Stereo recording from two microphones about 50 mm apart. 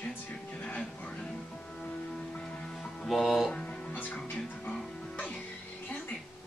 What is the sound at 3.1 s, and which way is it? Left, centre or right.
Music, centre.